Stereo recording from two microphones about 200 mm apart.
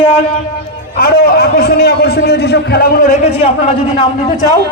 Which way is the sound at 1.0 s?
50° left (ahead or behind).